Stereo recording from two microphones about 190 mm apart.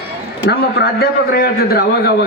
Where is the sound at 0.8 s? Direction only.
55° left (ahead or behind).